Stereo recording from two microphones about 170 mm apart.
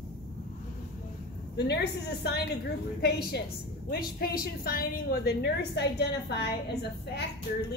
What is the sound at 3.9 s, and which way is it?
A woman's voice, 65° left (ahead or behind).